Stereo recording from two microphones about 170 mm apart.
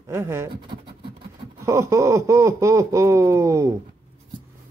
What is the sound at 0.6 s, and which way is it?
Speech, 30° right (ahead or behind).